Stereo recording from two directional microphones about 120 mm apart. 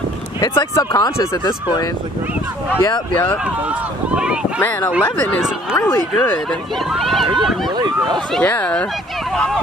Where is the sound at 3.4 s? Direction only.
10° right (ahead or behind).